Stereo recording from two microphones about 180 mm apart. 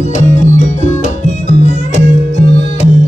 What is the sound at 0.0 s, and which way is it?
Music, 45° left (ahead or behind).